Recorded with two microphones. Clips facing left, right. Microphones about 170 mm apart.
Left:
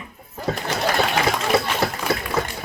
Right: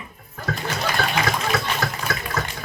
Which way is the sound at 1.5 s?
30° left (ahead or behind).